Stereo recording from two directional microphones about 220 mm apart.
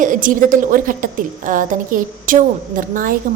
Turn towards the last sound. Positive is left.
turn(degrees=-40)  # may be behind; listen again after turning